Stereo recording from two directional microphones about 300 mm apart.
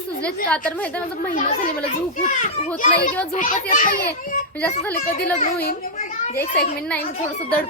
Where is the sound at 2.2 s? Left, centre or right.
Left.